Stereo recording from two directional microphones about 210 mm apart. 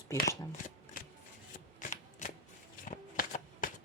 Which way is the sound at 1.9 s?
35° left (ahead or behind).